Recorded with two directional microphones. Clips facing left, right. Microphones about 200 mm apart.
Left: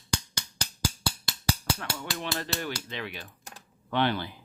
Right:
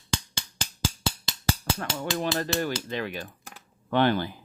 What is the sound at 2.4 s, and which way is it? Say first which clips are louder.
Speech: right 6 dB; 45° right (ahead or behind).